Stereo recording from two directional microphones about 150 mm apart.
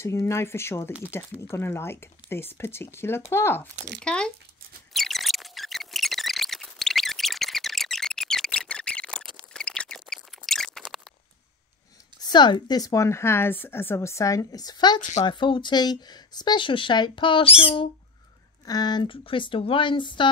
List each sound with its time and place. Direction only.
0.0 s speech: 20° left (ahead or behind)
4.9 s sine wave: centre (ahead or behind)
9.5 s a sound: 5° left (ahead or behind)
12.2 s a woman's voice: 30° left (ahead or behind)
15.0 s speech: 55° left (ahead or behind)
15.2 s speech: 35° left (ahead or behind)